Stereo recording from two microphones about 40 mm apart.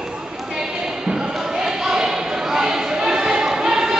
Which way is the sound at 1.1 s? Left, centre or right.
Right.